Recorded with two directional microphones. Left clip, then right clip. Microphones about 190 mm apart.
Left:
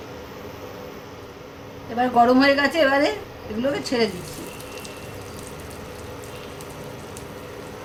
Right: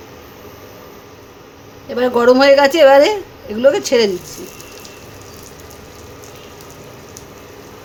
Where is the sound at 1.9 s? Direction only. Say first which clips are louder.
Right 6 dB; 65° right (ahead or behind).